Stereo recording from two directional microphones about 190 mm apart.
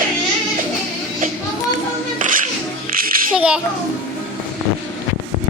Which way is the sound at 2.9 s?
50° right (ahead or behind).